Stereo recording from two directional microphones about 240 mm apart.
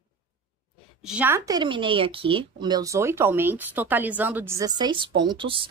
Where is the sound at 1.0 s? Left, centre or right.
Centre.